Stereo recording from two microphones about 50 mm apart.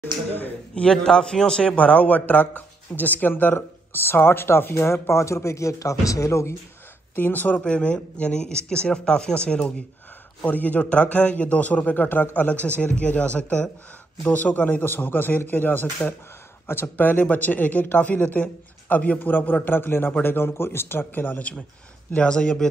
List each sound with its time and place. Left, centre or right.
0.0 s speech: left
1.0 s a man's voice: centre
1.8 s a man's voice: left
3.5 s speech: left
7.2 s speech: left
7.6 s a man's voice: left
10.4 s a man's voice: left
19.7 s speech: left
22.1 s a man's voice: centre